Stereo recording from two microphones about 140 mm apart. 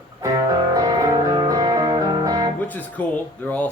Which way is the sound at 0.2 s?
25° right (ahead or behind).